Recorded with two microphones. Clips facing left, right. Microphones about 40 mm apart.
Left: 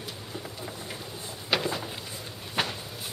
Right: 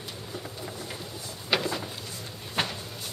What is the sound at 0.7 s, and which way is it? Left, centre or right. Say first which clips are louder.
Vehicle: right 1 dB; centre.